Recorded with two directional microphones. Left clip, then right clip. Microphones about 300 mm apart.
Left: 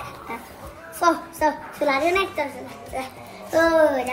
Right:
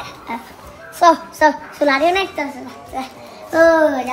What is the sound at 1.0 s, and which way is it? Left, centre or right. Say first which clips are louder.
A child's voice: right 8 dB; right.